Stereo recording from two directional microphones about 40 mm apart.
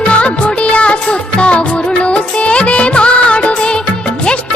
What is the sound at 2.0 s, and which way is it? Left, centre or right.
Music, left.